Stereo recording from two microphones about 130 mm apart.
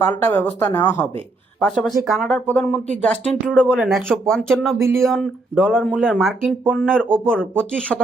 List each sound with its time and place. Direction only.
0.0 s speech: 15° left (ahead or behind)
1.5 s speech: 5° left (ahead or behind)
2.5 s speech: 10° left (ahead or behind)
3.8 s speech: centre (ahead or behind)